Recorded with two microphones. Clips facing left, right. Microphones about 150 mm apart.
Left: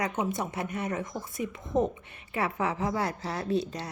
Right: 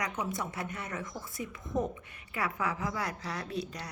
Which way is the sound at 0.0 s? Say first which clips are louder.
Left 5 dB; 20° left (ahead or behind).